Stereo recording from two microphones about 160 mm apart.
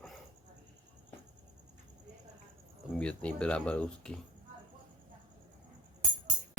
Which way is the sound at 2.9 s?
5° left (ahead or behind).